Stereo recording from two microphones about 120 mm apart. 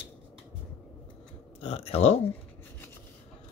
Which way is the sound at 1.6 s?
60° left (ahead or behind).